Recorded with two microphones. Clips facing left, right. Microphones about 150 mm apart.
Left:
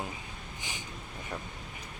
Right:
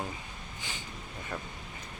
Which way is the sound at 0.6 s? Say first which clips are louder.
Even; 15° left (ahead or behind).